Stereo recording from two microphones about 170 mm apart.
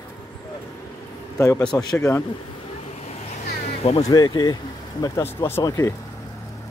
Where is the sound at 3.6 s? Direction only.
40° left (ahead or behind).